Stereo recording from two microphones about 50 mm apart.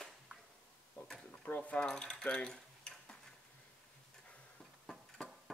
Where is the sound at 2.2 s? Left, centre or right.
Centre.